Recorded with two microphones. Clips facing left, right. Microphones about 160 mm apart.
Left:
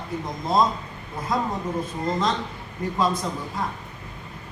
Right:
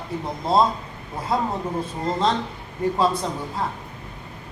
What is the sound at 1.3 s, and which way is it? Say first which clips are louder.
Speech: right 2 dB; 30° right (ahead or behind).